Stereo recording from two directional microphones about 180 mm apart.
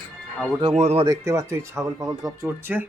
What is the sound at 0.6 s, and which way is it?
Speech, 35° right (ahead or behind).